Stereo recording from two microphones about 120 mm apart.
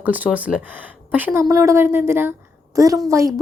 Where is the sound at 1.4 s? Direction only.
25° right (ahead or behind).